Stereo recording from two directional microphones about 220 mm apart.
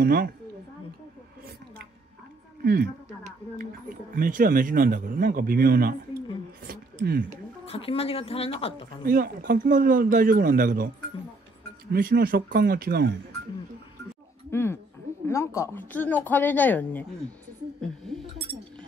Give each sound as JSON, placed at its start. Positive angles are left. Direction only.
{"t": 0.0, "sound": "speech", "side_deg": -40}
{"t": 2.6, "sound": "a sound", "side_deg": -45}
{"t": 4.1, "sound": "speech", "side_deg": -40}
{"t": 7.6, "sound": "speech", "side_deg": 25}
{"t": 9.0, "sound": "speech", "side_deg": -40}
{"t": 11.9, "sound": "speech", "side_deg": -40}
{"t": 14.5, "sound": "speech", "side_deg": 10}